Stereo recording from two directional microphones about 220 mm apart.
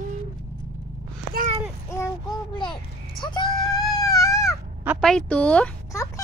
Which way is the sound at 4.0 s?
15° left (ahead or behind).